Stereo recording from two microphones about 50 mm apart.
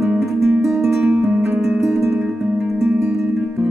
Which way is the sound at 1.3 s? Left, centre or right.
Right.